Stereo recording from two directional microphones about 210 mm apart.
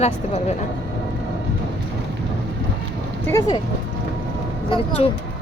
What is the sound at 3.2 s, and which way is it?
Speech, 15° left (ahead or behind).